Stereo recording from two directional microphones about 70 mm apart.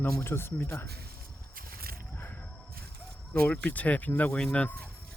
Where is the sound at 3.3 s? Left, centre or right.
Left.